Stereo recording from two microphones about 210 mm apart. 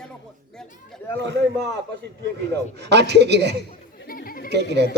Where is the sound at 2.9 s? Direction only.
55° right (ahead or behind).